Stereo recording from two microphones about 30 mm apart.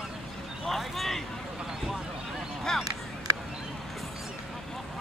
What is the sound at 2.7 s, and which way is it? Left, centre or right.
Chop, centre.